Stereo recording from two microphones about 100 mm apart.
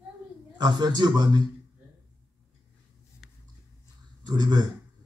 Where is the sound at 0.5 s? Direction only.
45° right (ahead or behind).